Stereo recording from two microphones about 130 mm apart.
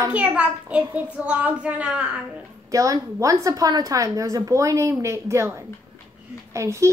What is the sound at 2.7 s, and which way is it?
A woman's voice, 25° right (ahead or behind).